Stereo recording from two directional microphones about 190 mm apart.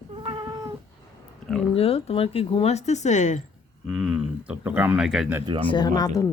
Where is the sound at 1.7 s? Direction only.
30° left (ahead or behind).